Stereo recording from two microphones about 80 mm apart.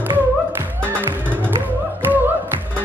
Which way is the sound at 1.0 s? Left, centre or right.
Right.